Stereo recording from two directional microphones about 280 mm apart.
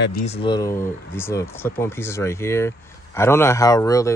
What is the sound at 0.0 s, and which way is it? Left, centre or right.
Speech, left.